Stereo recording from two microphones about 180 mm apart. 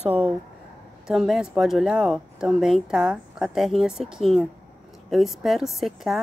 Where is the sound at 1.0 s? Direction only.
Centre (ahead or behind).